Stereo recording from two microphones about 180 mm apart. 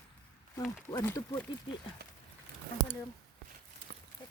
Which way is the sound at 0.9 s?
20° left (ahead or behind).